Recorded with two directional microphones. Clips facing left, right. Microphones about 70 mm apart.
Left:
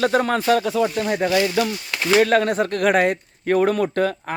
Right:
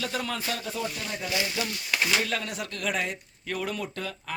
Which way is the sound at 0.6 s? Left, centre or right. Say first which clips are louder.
Left 12 dB; left.